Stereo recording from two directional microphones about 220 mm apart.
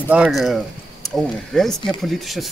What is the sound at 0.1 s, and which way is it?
Speech, 5° right (ahead or behind).